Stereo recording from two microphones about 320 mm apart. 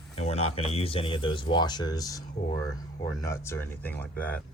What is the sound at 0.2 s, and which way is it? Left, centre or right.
Speech, centre.